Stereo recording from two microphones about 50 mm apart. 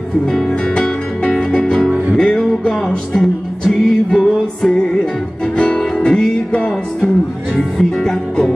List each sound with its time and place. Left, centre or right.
0.3 s music: centre
7.5 s music: centre